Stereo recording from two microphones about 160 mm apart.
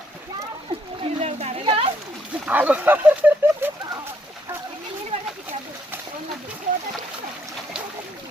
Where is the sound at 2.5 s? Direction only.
10° right (ahead or behind).